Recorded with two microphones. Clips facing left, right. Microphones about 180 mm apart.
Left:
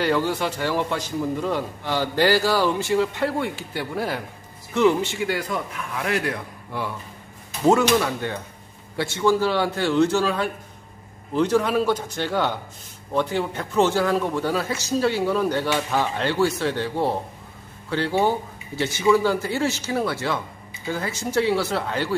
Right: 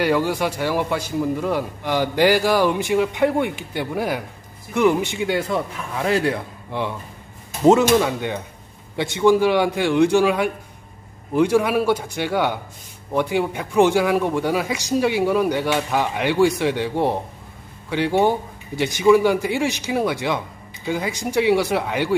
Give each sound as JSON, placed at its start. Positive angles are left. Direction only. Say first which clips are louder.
{"t": 0.0, "sound": "a man's voice", "louder": "right 2 dB", "side_deg": -10}